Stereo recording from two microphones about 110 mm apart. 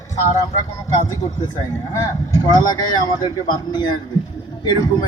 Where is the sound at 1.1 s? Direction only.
35° left (ahead or behind).